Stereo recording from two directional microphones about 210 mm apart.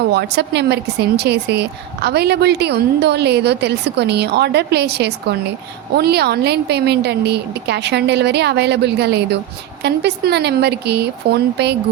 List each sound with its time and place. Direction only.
0.0 s speech: 50° right (ahead or behind)